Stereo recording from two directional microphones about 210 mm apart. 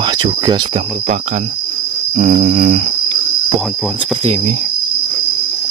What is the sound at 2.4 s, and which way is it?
Cricket, 35° right (ahead or behind).